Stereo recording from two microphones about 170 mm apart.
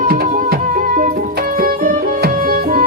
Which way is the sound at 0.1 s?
55° right (ahead or behind).